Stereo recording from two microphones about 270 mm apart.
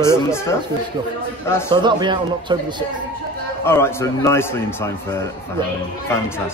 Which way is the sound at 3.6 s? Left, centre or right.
Centre.